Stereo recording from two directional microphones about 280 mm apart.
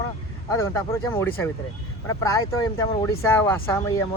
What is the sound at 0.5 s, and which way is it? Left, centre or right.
Speech, centre.